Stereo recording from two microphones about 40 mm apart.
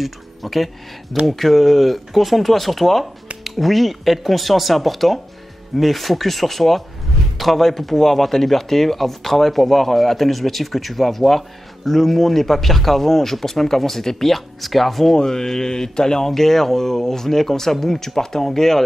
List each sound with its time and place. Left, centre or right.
0.0 s speech: centre
15.1 s speech: centre